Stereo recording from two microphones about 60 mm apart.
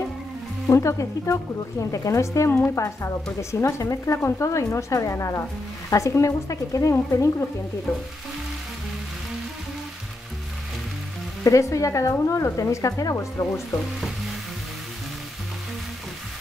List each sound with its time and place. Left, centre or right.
0.7 s speech: left
11.4 s speech: left